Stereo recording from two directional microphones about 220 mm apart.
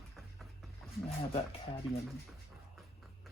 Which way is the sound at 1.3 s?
25° left (ahead or behind).